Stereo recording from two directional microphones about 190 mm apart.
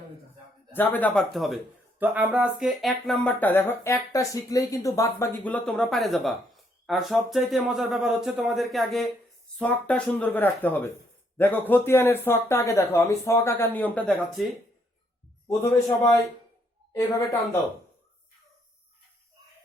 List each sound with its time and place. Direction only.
0.7 s speech: 10° left (ahead or behind)
16.9 s speech: 15° left (ahead or behind)